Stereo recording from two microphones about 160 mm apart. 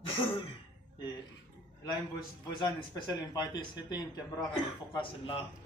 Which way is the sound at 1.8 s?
25° left (ahead or behind).